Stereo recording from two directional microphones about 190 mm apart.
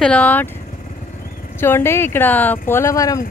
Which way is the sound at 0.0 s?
5° left (ahead or behind).